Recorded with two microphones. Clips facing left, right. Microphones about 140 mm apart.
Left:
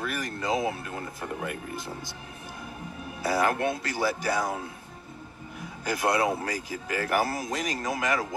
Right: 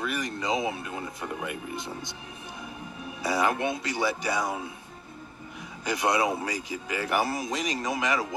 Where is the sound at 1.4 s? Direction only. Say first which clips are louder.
Even; 50° left (ahead or behind).